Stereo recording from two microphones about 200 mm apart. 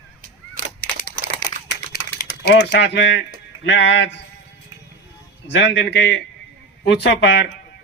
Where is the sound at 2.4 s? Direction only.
60° left (ahead or behind).